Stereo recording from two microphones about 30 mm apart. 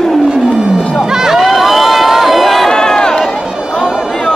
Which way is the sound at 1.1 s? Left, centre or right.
Centre.